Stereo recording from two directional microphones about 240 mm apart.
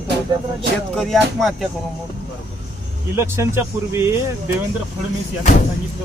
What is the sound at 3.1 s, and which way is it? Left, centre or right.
Speech, centre.